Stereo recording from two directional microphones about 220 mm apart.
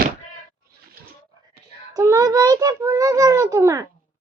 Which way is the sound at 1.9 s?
15° right (ahead or behind).